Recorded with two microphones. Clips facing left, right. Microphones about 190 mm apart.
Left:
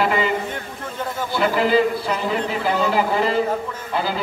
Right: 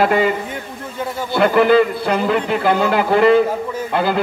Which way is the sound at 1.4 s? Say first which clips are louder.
Right 6 dB; 60° right (ahead or behind).